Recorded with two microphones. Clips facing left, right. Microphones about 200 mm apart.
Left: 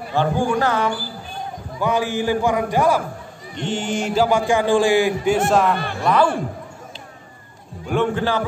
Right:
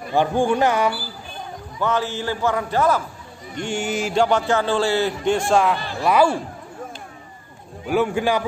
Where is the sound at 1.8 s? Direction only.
15° left (ahead or behind).